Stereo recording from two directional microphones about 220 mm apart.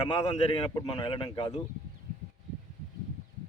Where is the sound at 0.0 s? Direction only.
25° left (ahead or behind).